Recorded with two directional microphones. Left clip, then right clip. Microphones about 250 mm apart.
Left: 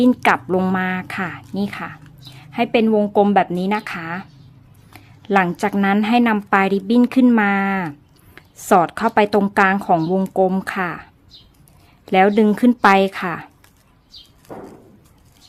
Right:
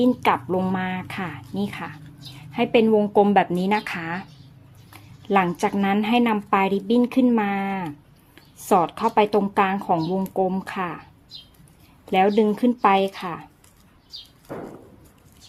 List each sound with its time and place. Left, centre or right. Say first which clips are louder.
0.0 s a woman's voice: left 4 dB; left
12.0 s speech: left 4 dB; left